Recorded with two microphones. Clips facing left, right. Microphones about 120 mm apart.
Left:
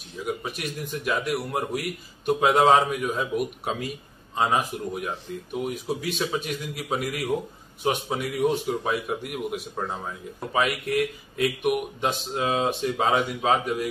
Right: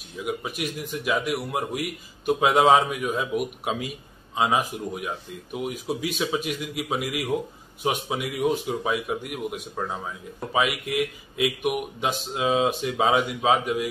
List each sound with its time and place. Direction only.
0.4 s a man's voice: 5° right (ahead or behind)
10.5 s a man's voice: 5° right (ahead or behind)